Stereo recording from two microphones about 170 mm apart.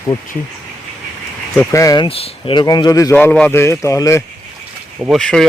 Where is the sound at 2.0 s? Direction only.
35° left (ahead or behind).